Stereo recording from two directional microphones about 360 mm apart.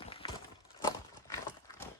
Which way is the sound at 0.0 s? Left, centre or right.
Centre.